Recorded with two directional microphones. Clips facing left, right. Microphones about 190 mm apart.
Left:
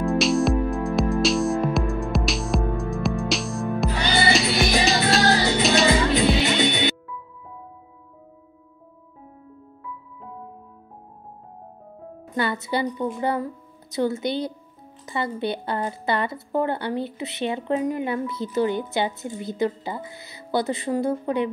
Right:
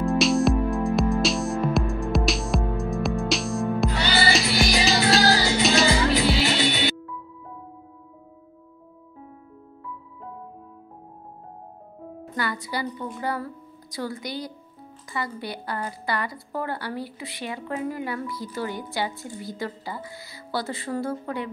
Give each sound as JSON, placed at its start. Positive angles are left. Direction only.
{"t": 0.2, "sound": "music", "side_deg": 0}
{"t": 3.9, "sound": "music", "side_deg": 15}
{"t": 4.3, "sound": "music", "side_deg": 0}
{"t": 6.0, "sound": "music", "side_deg": 20}
{"t": 12.4, "sound": "a woman's voice", "side_deg": 25}